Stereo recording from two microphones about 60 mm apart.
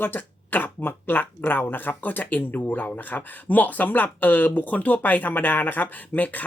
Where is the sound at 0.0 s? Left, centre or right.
Left.